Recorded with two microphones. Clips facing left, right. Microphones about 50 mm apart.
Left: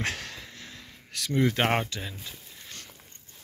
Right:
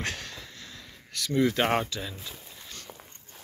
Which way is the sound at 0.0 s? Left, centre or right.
Left.